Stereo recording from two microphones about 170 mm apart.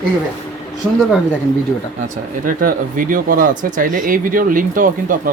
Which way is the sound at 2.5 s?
55° right (ahead or behind).